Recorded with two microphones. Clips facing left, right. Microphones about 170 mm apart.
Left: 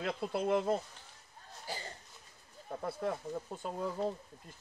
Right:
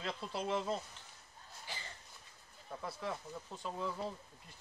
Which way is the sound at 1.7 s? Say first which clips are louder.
Left 7 dB; 40° left (ahead or behind).